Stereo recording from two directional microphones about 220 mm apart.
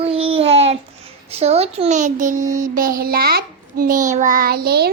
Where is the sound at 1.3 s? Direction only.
30° right (ahead or behind).